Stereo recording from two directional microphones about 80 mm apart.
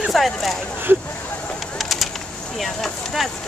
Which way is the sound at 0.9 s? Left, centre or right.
Right.